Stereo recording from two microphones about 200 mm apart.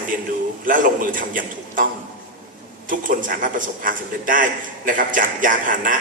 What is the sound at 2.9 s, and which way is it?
A man's voice, 45° right (ahead or behind).